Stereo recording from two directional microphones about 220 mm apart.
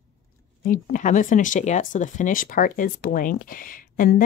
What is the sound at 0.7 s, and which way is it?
Speech, 35° left (ahead or behind).